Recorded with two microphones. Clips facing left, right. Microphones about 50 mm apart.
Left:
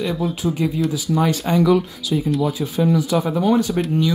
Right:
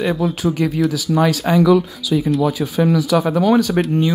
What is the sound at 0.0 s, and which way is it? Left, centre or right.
Speech, right.